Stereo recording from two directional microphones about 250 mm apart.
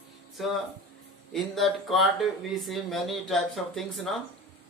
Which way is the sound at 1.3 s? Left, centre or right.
Centre.